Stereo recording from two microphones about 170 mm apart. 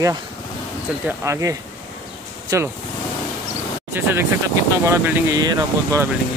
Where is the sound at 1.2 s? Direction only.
20° right (ahead or behind).